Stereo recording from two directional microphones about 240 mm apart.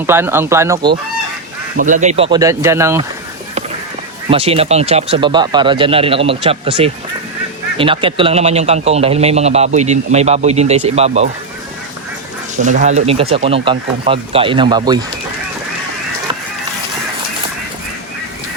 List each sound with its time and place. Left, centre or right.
0.0 s speech: centre
1.8 s a man's voice: right; by 3.1 s centre
4.3 s a man's voice: right
12.6 s a man's voice: right